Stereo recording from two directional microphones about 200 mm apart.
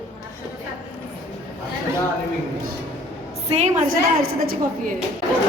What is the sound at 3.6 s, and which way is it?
A woman's voice, 40° right (ahead or behind).